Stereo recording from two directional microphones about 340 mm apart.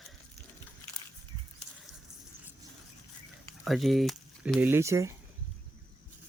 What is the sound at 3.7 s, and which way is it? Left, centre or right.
Speech, centre.